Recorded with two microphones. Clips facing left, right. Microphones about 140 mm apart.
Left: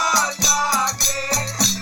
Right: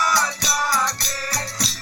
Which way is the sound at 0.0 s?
15° left (ahead or behind).